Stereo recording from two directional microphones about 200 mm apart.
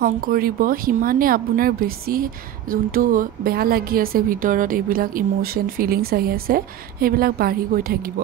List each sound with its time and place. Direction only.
0.0 s a woman's voice: 45° right (ahead or behind)